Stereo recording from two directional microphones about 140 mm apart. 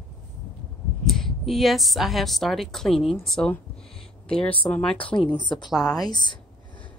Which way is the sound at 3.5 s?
5° left (ahead or behind).